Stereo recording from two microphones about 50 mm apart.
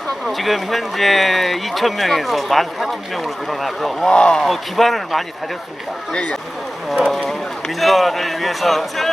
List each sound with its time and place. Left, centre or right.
0.3 s speech: centre
4.1 s speech: centre
4.4 s speech: centre
7.8 s speech: centre